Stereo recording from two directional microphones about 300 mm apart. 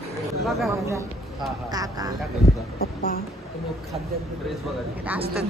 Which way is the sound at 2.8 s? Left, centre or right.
Left.